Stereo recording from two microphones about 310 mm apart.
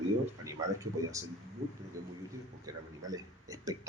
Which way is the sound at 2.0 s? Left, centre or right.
Centre.